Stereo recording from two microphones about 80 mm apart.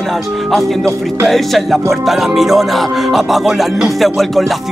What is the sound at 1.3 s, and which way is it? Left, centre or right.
Music, centre.